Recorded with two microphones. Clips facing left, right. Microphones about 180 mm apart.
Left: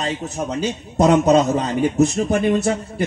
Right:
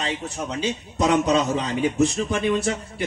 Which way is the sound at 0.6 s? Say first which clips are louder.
Left 6 dB; 45° left (ahead or behind).